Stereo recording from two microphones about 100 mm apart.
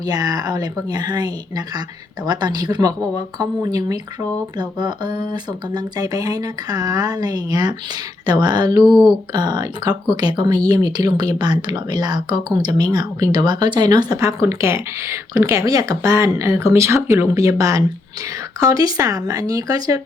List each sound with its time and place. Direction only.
0.0 s speech: 40° right (ahead or behind)
8.9 s speech: centre (ahead or behind)
9.3 s speech: 45° right (ahead or behind)
14.2 s speech: 30° right (ahead or behind)